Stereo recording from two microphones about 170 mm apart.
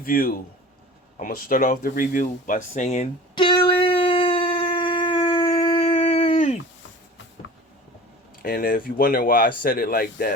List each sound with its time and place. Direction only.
0.0 s speech: 55° left (ahead or behind); by 3.1 s 40° left (ahead or behind)
3.3 s a sound: 25° left (ahead or behind)
3.7 s howl: 30° left (ahead or behind)
8.4 s speech: 55° left (ahead or behind)